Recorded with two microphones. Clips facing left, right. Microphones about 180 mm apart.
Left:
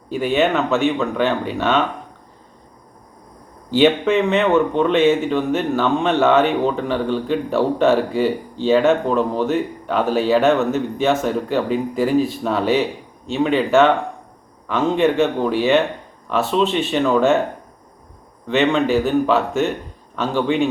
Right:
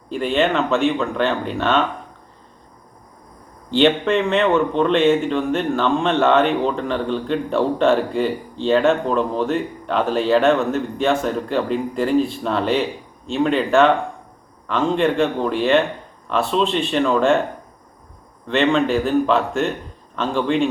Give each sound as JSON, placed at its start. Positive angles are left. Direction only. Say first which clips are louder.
{"t": 0.1, "sound": "speech", "louder": "left 1 dB", "side_deg": 5}
{"t": 3.7, "sound": "speech", "louder": "left 1 dB", "side_deg": 5}
{"t": 16.5, "sound": "speech", "louder": "left 2 dB", "side_deg": 20}
{"t": 16.7, "sound": "speech", "louder": "left 1 dB", "side_deg": 5}
{"t": 18.4, "sound": "speech", "louder": "left 1 dB", "side_deg": 5}